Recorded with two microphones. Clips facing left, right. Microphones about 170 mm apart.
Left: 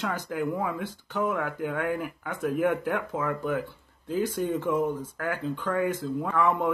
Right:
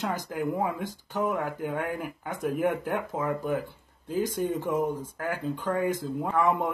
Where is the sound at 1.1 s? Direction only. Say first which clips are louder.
Even; 35° right (ahead or behind).